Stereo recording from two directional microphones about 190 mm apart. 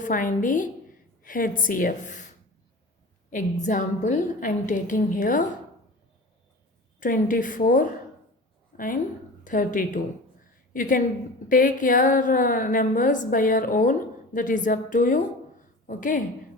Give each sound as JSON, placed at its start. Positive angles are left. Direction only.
{"t": 0.0, "sound": "a woman's voice", "side_deg": 45}
{"t": 3.2, "sound": "a woman's voice", "side_deg": 40}
{"t": 7.0, "sound": "a woman's voice", "side_deg": 45}
{"t": 8.7, "sound": "a sound", "side_deg": 45}
{"t": 9.4, "sound": "a woman's voice", "side_deg": 45}